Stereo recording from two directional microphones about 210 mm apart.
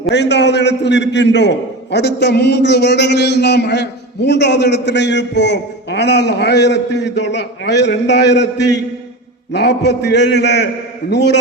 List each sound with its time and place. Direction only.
0.1 s a man's voice: 55° left (ahead or behind)